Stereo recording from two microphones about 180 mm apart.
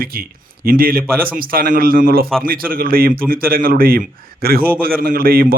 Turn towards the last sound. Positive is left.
turn(degrees=-55)  # may be behind; listen again after turning